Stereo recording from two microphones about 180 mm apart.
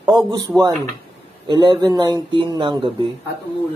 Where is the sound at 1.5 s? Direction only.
25° right (ahead or behind).